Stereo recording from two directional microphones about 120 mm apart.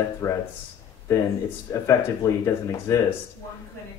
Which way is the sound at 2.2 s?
25° left (ahead or behind).